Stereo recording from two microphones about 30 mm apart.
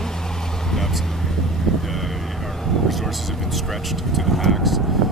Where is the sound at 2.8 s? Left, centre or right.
Centre.